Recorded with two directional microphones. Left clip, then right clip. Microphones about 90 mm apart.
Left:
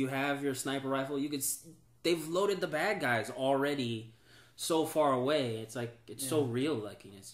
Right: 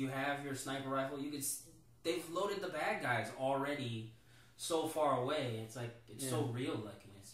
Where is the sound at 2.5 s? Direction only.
55° left (ahead or behind).